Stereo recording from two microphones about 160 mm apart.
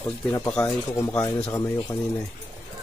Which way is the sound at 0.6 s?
20° left (ahead or behind).